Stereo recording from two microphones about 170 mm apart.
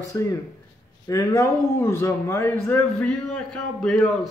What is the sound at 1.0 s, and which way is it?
A man's voice, 20° left (ahead or behind).